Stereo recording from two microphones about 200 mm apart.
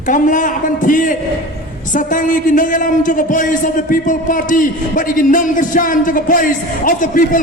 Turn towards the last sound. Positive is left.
turn(degrees=40)  # may be behind; listen again after turning